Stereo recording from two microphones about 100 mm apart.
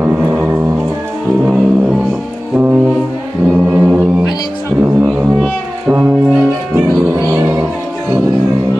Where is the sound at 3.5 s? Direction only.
20° right (ahead or behind).